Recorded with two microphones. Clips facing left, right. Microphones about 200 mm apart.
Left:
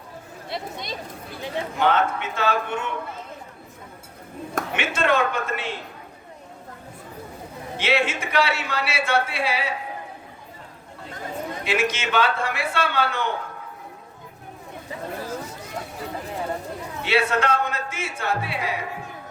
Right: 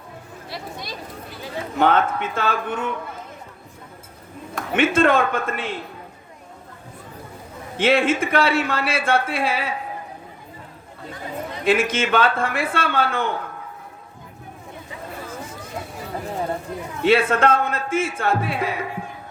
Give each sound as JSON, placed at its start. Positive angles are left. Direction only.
{"t": 0.5, "sound": "speech", "side_deg": 20}
{"t": 1.8, "sound": "speech", "side_deg": -50}
{"t": 4.7, "sound": "speech", "side_deg": -50}
{"t": 7.8, "sound": "speech", "side_deg": -50}
{"t": 11.6, "sound": "speech", "side_deg": -50}
{"t": 17.0, "sound": "speech", "side_deg": -50}